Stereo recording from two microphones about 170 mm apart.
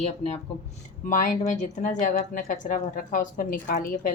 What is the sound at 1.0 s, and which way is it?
A woman's voice, 50° left (ahead or behind).